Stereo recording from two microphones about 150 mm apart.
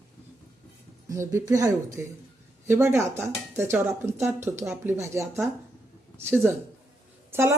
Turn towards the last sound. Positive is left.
turn(degrees=-15)  # may be behind; listen again after turning